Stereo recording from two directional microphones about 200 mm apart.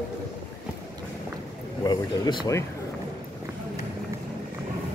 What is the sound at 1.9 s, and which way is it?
Speech, 20° left (ahead or behind).